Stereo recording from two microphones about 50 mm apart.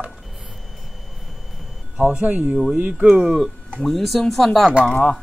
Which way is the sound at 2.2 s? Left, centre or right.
Right.